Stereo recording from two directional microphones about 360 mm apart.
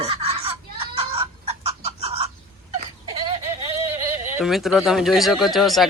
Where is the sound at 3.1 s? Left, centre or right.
Centre.